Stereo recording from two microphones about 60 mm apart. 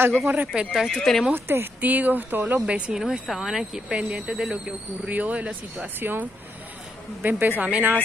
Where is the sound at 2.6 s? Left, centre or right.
Centre.